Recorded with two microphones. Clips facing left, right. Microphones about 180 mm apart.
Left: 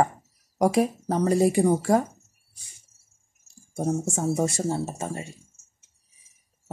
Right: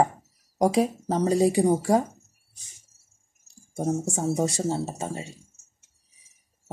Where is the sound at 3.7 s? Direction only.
15° right (ahead or behind).